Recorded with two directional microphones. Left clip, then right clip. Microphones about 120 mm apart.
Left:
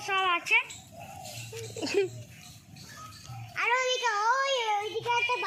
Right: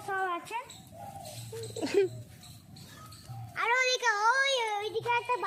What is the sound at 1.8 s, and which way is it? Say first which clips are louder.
Speech: right 1 dB; 25° right (ahead or behind).